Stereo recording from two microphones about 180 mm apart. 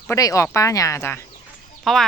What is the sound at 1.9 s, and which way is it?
Speech, centre (ahead or behind).